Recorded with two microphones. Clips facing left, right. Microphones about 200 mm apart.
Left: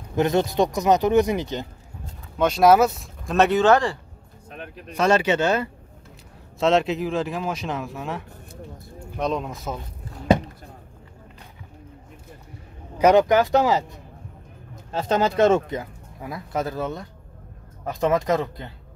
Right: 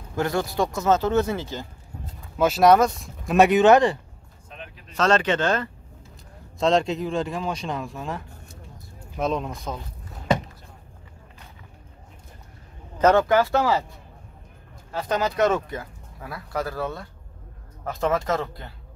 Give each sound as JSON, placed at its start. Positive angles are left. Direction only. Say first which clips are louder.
{"t": 0.1, "sound": "speech", "louder": "left 4 dB", "side_deg": 20}
{"t": 2.3, "sound": "speech", "louder": "left 1 dB", "side_deg": -5}
{"t": 3.3, "sound": "speech", "louder": "right 2 dB", "side_deg": -15}
{"t": 4.5, "sound": "a sound", "louder": "left 5 dB", "side_deg": 55}
{"t": 4.9, "sound": "speech", "louder": "left 1 dB", "side_deg": 10}
{"t": 12.9, "sound": "speech", "louder": "left 2 dB", "side_deg": 15}